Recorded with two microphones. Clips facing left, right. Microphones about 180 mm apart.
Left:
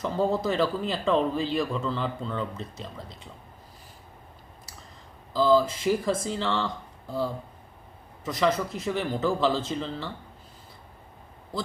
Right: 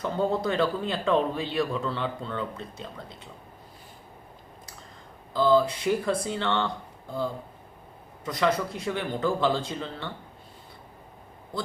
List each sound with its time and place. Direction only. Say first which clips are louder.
0.0 s speech: left 1 dB; centre (ahead or behind)
5.3 s speech: even; centre (ahead or behind)
8.2 s speech: even; centre (ahead or behind)